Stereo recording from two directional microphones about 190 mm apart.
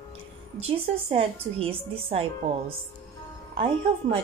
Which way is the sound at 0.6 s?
30° right (ahead or behind).